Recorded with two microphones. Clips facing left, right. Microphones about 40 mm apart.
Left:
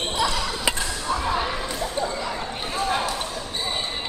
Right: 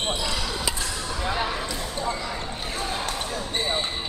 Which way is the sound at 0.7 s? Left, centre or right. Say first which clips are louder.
Left 5 dB; left.